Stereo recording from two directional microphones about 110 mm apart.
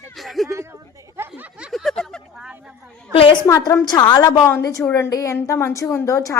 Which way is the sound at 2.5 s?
10° right (ahead or behind).